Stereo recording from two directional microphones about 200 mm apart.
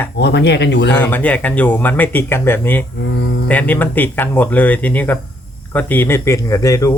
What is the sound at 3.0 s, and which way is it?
Speech, 60° left (ahead or behind).